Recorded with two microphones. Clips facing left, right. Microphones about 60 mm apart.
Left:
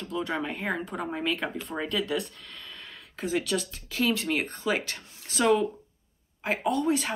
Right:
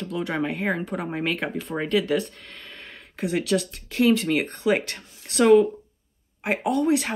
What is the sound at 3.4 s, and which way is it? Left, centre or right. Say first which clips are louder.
Speech: right 6 dB; right.